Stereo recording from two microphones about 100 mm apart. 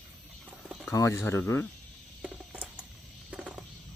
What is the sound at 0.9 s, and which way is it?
Speech, 30° left (ahead or behind).